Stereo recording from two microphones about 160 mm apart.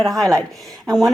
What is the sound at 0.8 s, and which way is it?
Speech, 25° right (ahead or behind).